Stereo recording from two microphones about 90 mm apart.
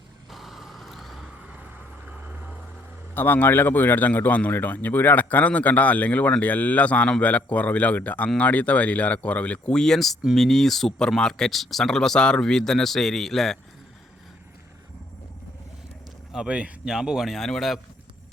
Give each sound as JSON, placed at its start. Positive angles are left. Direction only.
{"t": 0.3, "sound": "vehicle", "side_deg": 0}
{"t": 2.0, "sound": "vehicle", "side_deg": -15}
{"t": 3.2, "sound": "speech", "side_deg": 25}
{"t": 16.3, "sound": "speech", "side_deg": -10}